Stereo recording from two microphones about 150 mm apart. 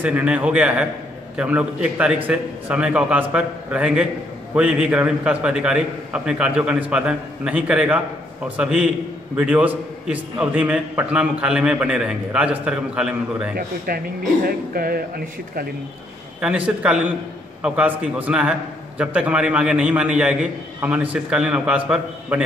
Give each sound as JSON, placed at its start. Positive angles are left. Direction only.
{"t": 0.0, "sound": "a man's voice", "side_deg": -10}
{"t": 13.6, "sound": "speech", "side_deg": -80}
{"t": 16.3, "sound": "a man's voice", "side_deg": -10}